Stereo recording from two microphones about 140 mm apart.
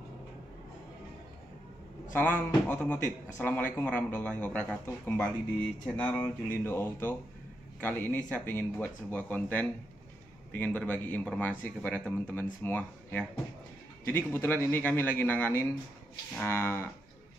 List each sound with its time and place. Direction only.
2.1 s speech: 15° left (ahead or behind)